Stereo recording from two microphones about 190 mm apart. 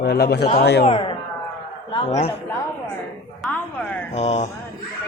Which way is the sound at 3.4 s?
10° left (ahead or behind).